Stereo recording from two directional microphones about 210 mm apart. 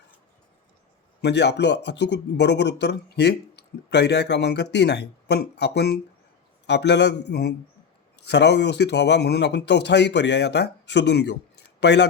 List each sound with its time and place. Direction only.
1.2 s a man's voice: 55° left (ahead or behind)